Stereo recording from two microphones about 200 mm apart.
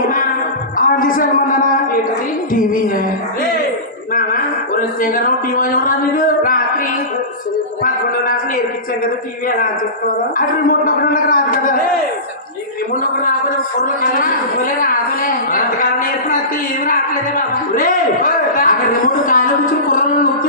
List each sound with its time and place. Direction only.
0.8 s a sound: 45° left (ahead or behind)
2.5 s a man's voice: 45° left (ahead or behind)
4.1 s speech: 45° left (ahead or behind)
10.3 s a man's voice: 45° left (ahead or behind)
13.7 s a man's voice: 45° left (ahead or behind)
17.7 s a man's voice: 45° left (ahead or behind)